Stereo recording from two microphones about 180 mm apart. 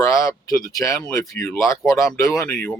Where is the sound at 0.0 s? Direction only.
15° left (ahead or behind).